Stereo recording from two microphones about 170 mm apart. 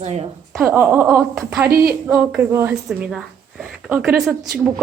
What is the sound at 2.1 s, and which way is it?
Speech, 15° right (ahead or behind).